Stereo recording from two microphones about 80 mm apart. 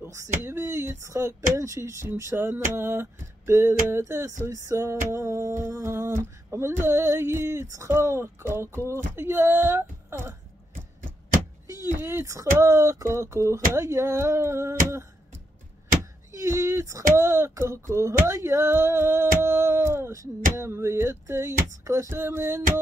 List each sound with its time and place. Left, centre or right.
0.0 s speech: right
2.5 s a sound: right
7.6 s speech: right
11.6 s a sound: right
11.9 s speech: right
16.3 s speech: right